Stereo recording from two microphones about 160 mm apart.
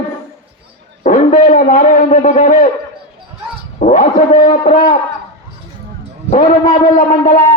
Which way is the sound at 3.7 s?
50° left (ahead or behind).